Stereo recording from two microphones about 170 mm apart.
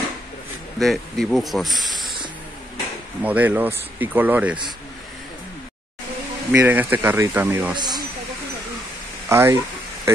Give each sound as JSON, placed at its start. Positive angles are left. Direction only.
{"t": 0.7, "sound": "speech", "side_deg": 0}
{"t": 3.2, "sound": "speech", "side_deg": -10}
{"t": 6.5, "sound": "speech", "side_deg": -10}
{"t": 7.7, "sound": "speech", "side_deg": -25}
{"t": 9.3, "sound": "speech", "side_deg": -15}